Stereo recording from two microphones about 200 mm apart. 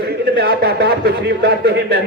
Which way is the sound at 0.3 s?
55° right (ahead or behind).